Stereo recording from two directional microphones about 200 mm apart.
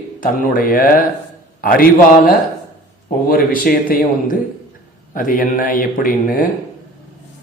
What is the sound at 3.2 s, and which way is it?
Speech, 45° left (ahead or behind).